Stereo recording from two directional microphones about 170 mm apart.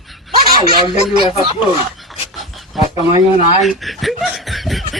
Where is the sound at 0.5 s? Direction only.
25° right (ahead or behind).